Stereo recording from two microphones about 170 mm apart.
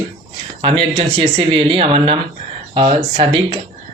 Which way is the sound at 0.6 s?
30° right (ahead or behind).